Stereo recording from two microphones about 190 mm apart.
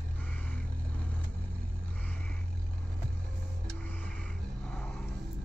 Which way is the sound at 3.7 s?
10° left (ahead or behind).